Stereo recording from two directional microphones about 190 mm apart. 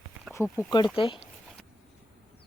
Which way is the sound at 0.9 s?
30° left (ahead or behind).